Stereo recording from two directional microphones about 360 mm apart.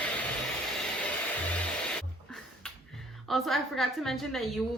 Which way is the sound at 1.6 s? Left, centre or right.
Centre.